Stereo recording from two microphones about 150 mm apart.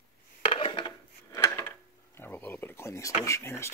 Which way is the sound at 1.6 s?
15° left (ahead or behind).